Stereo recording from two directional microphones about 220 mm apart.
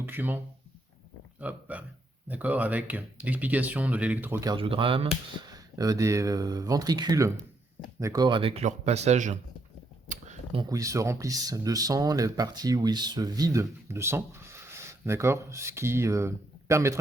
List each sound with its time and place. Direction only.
0.0 s speech: 10° right (ahead or behind)
1.4 s speech: 5° right (ahead or behind); by 9.4 s 35° right (ahead or behind)
10.1 s a sound: 30° right (ahead or behind)
10.6 s speech: 15° right (ahead or behind)